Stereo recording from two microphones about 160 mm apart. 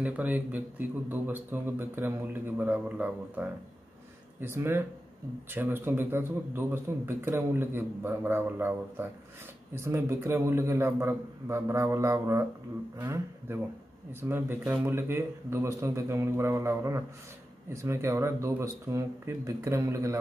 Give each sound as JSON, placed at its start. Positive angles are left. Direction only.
{"t": 0.0, "sound": "a man's voice", "side_deg": -10}